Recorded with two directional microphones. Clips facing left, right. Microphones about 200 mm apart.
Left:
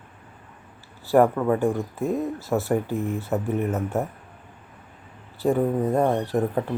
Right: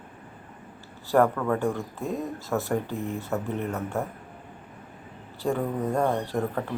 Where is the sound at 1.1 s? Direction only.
20° left (ahead or behind).